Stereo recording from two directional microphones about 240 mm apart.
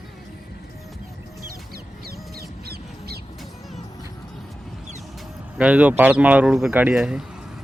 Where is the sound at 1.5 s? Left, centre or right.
Right.